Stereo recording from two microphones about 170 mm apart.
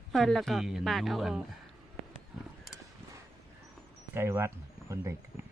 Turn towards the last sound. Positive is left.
turn(degrees=-15)  # may be behind; listen again after turning